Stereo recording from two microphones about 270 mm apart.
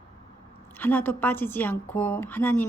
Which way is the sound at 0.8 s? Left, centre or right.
Centre.